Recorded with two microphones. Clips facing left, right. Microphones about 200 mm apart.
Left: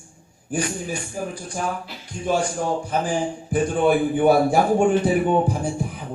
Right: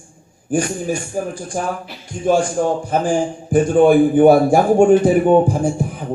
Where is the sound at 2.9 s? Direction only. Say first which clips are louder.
Right 5 dB; 45° right (ahead or behind).